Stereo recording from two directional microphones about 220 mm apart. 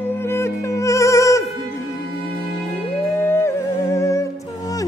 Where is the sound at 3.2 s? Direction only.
10° left (ahead or behind).